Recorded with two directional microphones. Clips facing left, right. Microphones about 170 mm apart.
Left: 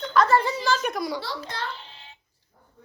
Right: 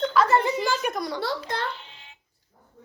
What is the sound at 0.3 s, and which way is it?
Speech, 20° right (ahead or behind).